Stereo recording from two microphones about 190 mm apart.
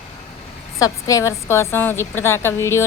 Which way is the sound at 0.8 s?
15° left (ahead or behind).